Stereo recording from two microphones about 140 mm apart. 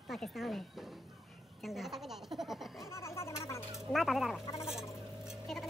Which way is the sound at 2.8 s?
20° left (ahead or behind).